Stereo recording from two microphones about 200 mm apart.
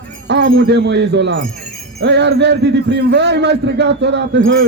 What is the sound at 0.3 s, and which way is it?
A man's voice, 55° right (ahead or behind).